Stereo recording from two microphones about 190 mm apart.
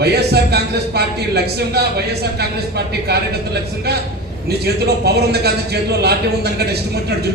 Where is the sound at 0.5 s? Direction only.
60° right (ahead or behind).